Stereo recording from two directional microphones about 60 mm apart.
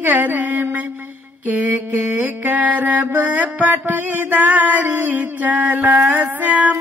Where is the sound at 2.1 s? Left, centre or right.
Right.